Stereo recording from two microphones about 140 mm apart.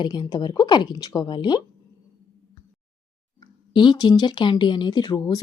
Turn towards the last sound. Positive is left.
turn(degrees=25)  # may be behind; listen again after turning